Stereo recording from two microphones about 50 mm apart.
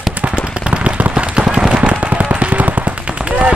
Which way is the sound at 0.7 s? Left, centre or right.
Right.